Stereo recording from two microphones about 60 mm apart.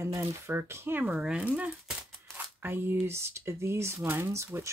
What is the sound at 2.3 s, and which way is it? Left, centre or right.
Speech, right.